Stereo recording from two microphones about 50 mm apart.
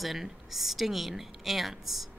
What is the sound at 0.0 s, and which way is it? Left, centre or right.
A woman's voice, centre.